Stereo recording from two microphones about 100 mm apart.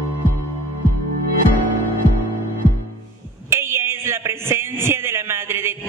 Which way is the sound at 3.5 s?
25° right (ahead or behind).